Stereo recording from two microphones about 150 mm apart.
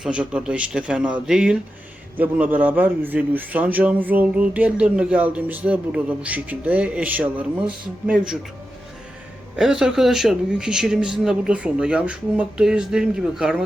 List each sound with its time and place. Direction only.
0.0 s a man's voice: 5° right (ahead or behind)
9.6 s speech: 5° right (ahead or behind)